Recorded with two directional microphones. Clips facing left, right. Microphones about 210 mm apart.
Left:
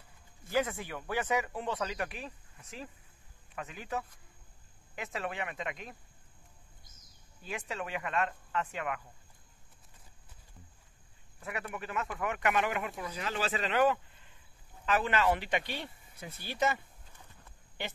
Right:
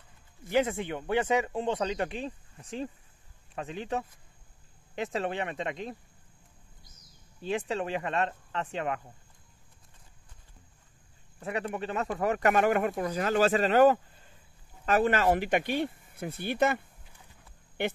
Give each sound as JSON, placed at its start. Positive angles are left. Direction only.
{"t": 0.5, "sound": "speech", "side_deg": -25}
{"t": 7.4, "sound": "speech", "side_deg": -30}
{"t": 11.3, "sound": "speech", "side_deg": -30}